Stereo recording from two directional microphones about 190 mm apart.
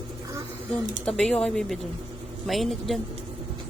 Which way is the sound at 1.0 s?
5° left (ahead or behind).